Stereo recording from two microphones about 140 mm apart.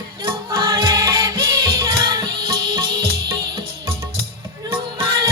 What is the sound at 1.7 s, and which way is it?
Music, 20° right (ahead or behind).